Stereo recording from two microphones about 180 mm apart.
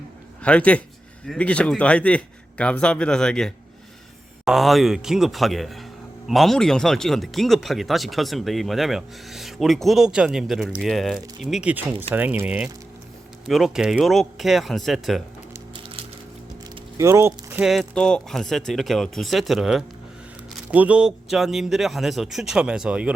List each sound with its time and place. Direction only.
0.4 s speech: 5° left (ahead or behind)
17.0 s speech: 15° right (ahead or behind)